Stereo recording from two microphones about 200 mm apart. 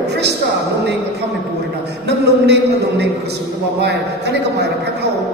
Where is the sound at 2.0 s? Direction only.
55° right (ahead or behind).